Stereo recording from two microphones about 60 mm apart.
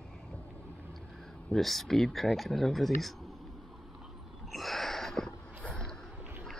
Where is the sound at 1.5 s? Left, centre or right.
Centre.